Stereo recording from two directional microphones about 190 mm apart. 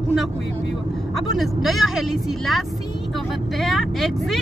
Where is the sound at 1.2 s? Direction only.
Centre (ahead or behind).